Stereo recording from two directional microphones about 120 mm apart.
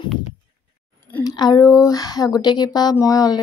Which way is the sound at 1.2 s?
35° left (ahead or behind).